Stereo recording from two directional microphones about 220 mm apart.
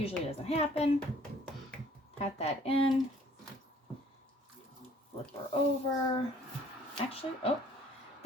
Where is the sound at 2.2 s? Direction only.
30° left (ahead or behind).